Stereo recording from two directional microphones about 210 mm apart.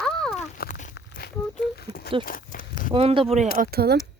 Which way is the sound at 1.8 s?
50° left (ahead or behind).